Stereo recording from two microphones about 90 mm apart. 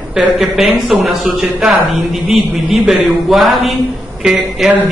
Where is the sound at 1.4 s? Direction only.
20° right (ahead or behind).